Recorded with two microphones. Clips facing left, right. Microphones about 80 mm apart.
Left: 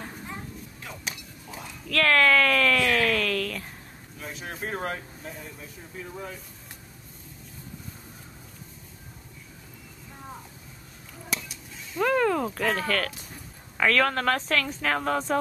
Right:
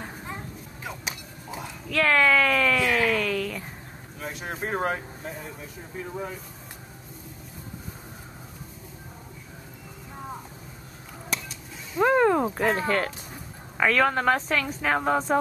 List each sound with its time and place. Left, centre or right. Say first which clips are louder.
0.8 s a sound: right 3 dB; centre
4.2 s vehicle: right 3 dB; centre
4.6 s speech: right 4 dB; centre
12.0 s speech: right 3 dB; right
13.7 s speech: right 1 dB; centre